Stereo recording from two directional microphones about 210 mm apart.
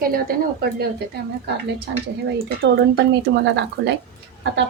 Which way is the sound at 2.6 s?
55° right (ahead or behind).